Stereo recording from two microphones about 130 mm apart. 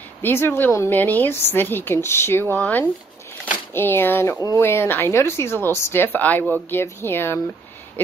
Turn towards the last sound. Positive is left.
turn(degrees=20)  # may be behind; listen again after turning